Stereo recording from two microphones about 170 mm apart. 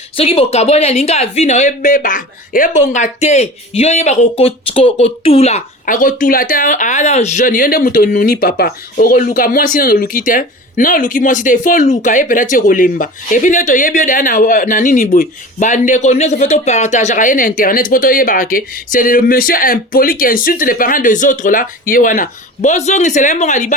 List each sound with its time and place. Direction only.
0.2 s speech: 35° left (ahead or behind)
5.8 s speech: 55° left (ahead or behind)